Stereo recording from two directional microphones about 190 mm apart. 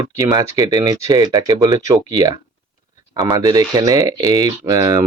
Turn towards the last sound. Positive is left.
turn(degrees=-20)  # may be behind; listen again after turning